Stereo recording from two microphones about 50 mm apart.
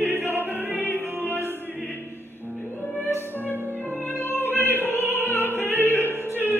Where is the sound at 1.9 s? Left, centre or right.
Left.